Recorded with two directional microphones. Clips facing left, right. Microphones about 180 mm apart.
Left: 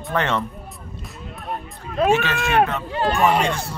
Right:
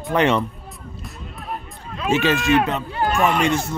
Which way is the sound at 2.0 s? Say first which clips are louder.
Left 1 dB; 55° left (ahead or behind).